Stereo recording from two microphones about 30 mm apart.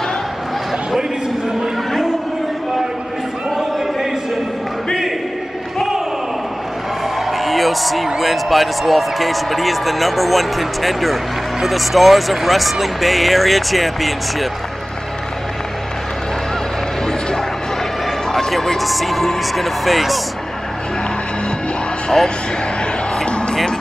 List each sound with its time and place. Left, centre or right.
7.2 s a man's voice: centre
18.8 s a man's voice: centre
22.2 s speech: centre
23.2 s music: left